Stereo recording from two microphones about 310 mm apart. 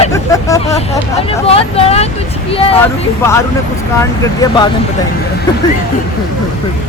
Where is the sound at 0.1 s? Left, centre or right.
Centre.